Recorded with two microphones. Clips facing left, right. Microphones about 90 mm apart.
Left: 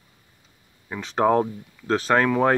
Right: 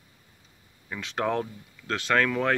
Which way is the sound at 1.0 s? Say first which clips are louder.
Left 8 dB; 30° left (ahead or behind).